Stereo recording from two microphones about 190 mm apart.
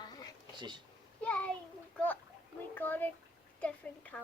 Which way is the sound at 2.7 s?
10° left (ahead or behind).